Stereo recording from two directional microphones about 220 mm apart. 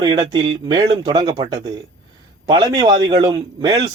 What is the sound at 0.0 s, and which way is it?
A man's voice, 15° right (ahead or behind).